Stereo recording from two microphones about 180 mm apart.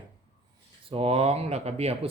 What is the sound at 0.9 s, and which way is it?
Speech, 30° right (ahead or behind).